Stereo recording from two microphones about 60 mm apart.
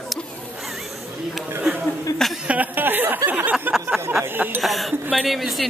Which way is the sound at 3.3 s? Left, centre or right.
Right.